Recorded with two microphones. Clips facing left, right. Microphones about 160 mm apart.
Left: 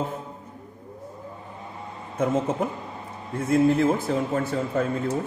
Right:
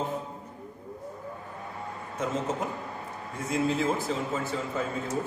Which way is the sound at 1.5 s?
20° left (ahead or behind).